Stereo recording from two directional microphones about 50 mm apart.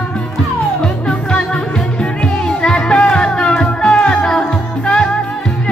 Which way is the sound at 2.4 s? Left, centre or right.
Centre.